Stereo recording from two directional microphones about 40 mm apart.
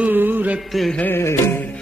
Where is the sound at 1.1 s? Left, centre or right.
Left.